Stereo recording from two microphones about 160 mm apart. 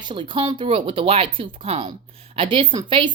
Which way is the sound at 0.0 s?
30° right (ahead or behind).